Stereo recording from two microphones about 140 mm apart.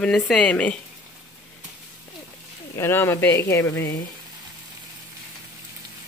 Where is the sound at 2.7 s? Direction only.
20° left (ahead or behind).